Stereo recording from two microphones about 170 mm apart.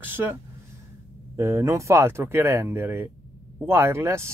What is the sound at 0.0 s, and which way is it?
Speech, 10° right (ahead or behind).